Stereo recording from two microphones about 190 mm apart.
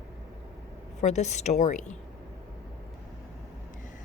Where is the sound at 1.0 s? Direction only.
35° left (ahead or behind).